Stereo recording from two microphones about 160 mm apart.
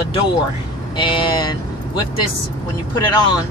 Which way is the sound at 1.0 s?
30° left (ahead or behind).